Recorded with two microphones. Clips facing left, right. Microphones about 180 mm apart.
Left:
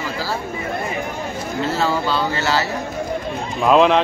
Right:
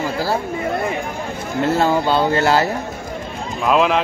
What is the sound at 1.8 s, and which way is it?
Speech, 50° right (ahead or behind).